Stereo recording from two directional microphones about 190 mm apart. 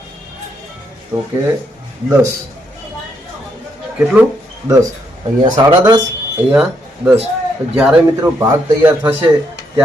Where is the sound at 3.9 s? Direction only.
5° right (ahead or behind).